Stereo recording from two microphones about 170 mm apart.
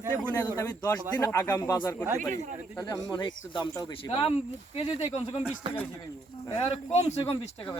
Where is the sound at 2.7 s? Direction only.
20° left (ahead or behind).